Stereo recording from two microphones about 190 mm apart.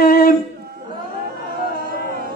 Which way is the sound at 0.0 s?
50° left (ahead or behind).